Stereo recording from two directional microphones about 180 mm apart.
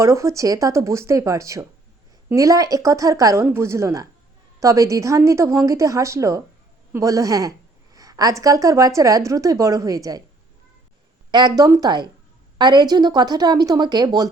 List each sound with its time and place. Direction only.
0.0 s a woman's voice: 15° right (ahead or behind)
11.3 s a woman's voice: 25° right (ahead or behind)